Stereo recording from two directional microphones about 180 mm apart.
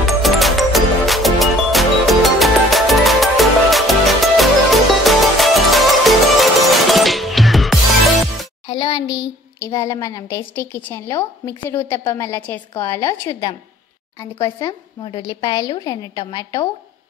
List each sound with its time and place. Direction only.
0.0 s music: centre (ahead or behind)
8.6 s a sound: 30° left (ahead or behind)
9.6 s a woman's voice: 20° left (ahead or behind)